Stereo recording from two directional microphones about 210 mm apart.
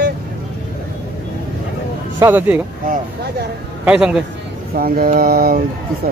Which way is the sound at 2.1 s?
10° right (ahead or behind).